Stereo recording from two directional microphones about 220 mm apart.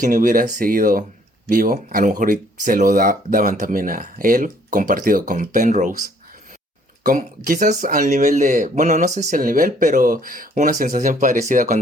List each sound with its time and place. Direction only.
0.0 s speech: 35° right (ahead or behind)
7.0 s speech: 40° right (ahead or behind)